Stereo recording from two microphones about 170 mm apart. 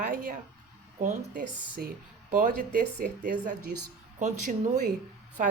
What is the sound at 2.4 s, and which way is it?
Speech, 55° right (ahead or behind).